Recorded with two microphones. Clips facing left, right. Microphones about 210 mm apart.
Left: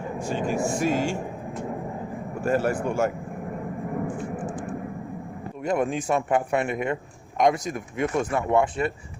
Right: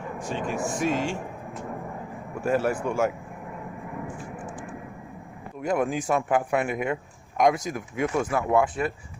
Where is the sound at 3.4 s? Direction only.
45° left (ahead or behind).